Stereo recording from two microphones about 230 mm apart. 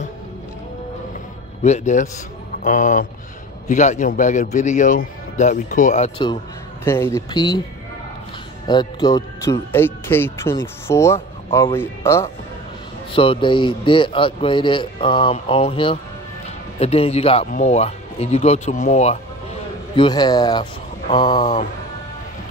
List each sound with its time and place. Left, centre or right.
1.6 s a man's voice: left
6.8 s speech: centre
8.6 s speech: centre
13.1 s a man's voice: left
20.0 s speech: centre